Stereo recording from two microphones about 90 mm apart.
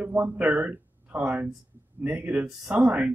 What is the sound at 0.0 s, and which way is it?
Speech, 20° right (ahead or behind).